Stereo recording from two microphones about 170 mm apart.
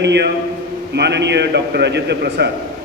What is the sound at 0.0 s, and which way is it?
A man's voice, 90° right.